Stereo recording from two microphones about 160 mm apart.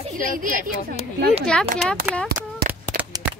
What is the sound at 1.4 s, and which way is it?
Speech, 5° left (ahead or behind).